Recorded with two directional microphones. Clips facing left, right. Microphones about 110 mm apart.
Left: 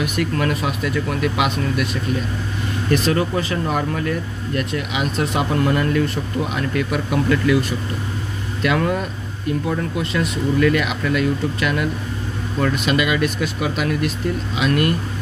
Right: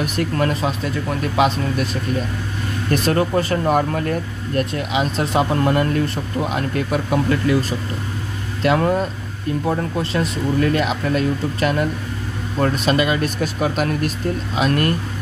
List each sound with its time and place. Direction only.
0.0 s speech: 35° right (ahead or behind)
2.9 s speech: 40° right (ahead or behind)
8.6 s speech: 30° right (ahead or behind)